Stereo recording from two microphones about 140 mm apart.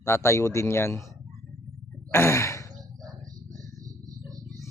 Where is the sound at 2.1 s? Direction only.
20° left (ahead or behind).